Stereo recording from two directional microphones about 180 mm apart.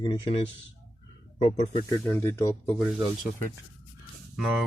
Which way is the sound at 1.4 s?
35° left (ahead or behind).